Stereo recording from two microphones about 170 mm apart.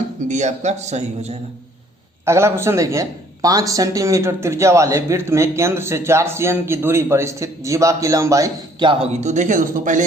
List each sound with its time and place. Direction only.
0.3 s a man's voice: 45° right (ahead or behind)
2.2 s a man's voice: 15° right (ahead or behind)
9.2 s a man's voice: 45° right (ahead or behind)